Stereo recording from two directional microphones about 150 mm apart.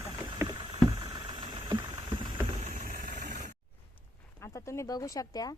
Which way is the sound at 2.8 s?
90° right.